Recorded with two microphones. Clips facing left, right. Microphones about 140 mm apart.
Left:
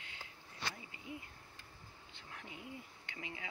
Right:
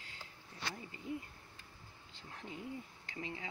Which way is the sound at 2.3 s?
35° right (ahead or behind).